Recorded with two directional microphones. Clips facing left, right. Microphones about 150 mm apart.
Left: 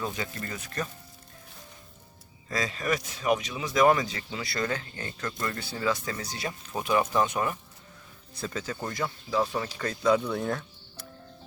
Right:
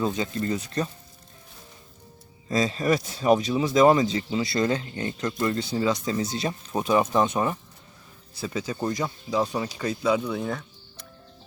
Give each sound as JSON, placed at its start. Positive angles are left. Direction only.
{"t": 0.0, "sound": "speech", "side_deg": -25}
{"t": 2.5, "sound": "speech", "side_deg": -25}
{"t": 8.4, "sound": "speech", "side_deg": -15}